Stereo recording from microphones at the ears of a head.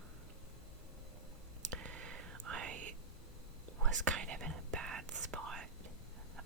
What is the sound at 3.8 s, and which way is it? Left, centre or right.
Whispering, right.